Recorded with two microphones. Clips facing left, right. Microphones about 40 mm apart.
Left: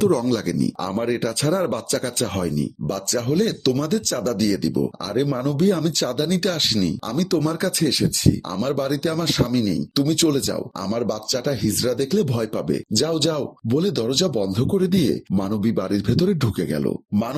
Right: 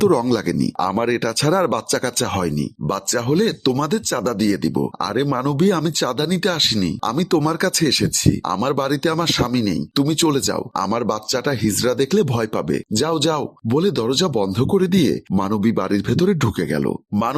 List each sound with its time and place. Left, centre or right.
1.6 s speech: right
3.1 s speech: right
4.4 s speech: right
6.2 s speech: right
6.5 s speech: right
7.6 s speech: right
8.6 s speech: right
10.1 s speech: right
10.4 s speech: right
11.0 s speech: right
12.9 s speech: right
14.8 s speech: right
15.6 s speech: right